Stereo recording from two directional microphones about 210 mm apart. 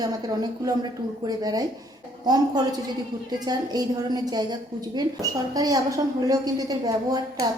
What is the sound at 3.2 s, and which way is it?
A woman's voice, 20° right (ahead or behind).